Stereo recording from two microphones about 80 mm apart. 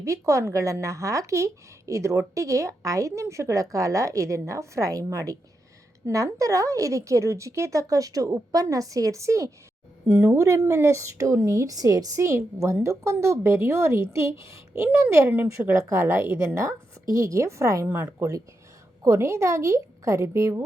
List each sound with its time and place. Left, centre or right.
0.0 s a woman's voice: right
12.2 s a woman's voice: right